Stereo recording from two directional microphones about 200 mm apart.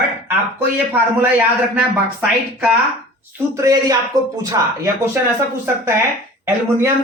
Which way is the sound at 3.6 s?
15° right (ahead or behind).